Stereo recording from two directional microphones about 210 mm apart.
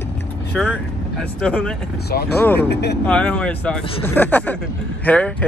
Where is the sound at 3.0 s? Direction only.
5° left (ahead or behind).